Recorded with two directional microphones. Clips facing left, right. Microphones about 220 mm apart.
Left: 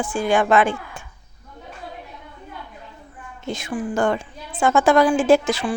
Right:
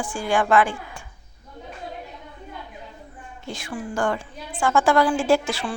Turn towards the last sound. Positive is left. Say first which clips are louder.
# left 4 dB
turn(degrees=20)  # may be behind; listen again after turning